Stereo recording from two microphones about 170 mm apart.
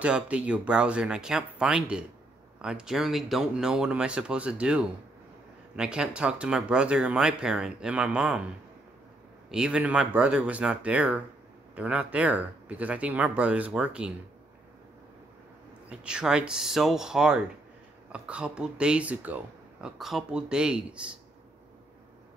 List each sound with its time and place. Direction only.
0.0 s speech: 5° right (ahead or behind)
9.5 s speech: 5° right (ahead or behind)
15.9 s speech: 5° right (ahead or behind)